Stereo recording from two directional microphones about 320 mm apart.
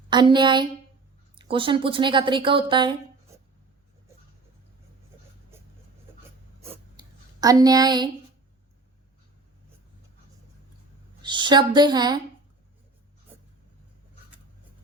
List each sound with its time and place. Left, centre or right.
0.1 s a woman's voice: centre
7.4 s a woman's voice: centre
11.2 s a woman's voice: centre